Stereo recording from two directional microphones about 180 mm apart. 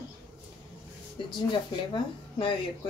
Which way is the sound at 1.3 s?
25° left (ahead or behind).